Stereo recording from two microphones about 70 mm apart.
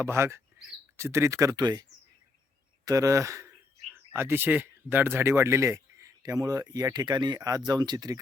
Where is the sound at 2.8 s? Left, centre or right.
Right.